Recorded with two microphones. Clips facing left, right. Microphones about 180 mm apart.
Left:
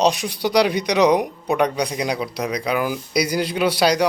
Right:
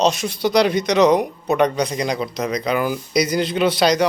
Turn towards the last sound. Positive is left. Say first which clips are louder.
# right 1 dB
turn(degrees=10)  # may be behind; listen again after turning